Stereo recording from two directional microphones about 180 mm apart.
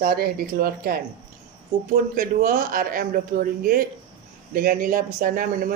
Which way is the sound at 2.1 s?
50° right (ahead or behind).